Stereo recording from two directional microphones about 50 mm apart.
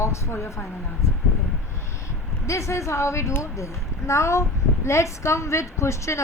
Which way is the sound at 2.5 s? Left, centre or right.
Left.